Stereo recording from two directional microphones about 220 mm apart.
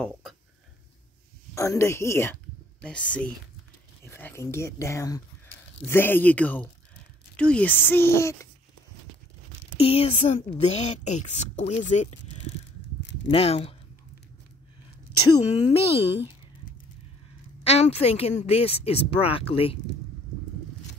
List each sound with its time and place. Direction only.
0.0 s dishes: centre (ahead or behind)
1.5 s speech: 15° left (ahead or behind)
9.8 s a woman's voice: 25° left (ahead or behind)
13.3 s a woman's voice: 25° left (ahead or behind)
15.3 s a woman's voice: 25° left (ahead or behind)
17.6 s a woman's voice: 30° left (ahead or behind)